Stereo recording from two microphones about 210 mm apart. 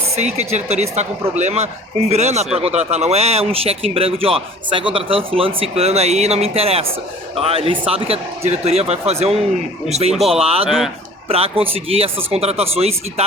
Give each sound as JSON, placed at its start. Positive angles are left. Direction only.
{"t": 0.3, "sound": "a woman's voice", "side_deg": -30}
{"t": 10.1, "sound": "speech", "side_deg": 0}
{"t": 10.4, "sound": "speech", "side_deg": -30}